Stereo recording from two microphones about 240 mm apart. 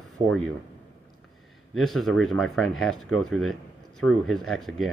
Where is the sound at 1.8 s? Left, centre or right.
Centre.